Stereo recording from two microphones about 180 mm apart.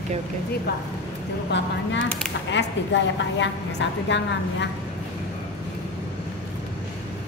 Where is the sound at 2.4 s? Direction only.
80° left.